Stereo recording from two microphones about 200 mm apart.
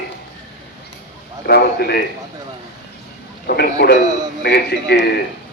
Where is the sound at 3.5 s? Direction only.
50° left (ahead or behind).